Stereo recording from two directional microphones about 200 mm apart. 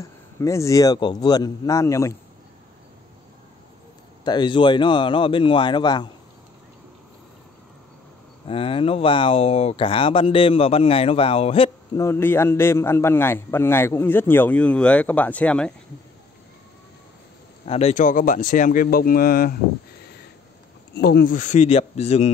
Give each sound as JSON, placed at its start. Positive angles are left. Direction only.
{"t": 0.0, "sound": "a man's voice", "side_deg": 15}
{"t": 4.2, "sound": "speech", "side_deg": 20}
{"t": 8.5, "sound": "speech", "side_deg": 25}
{"t": 12.0, "sound": "a man's voice", "side_deg": 10}
{"t": 17.6, "sound": "speech", "side_deg": 30}
{"t": 20.9, "sound": "speech", "side_deg": 55}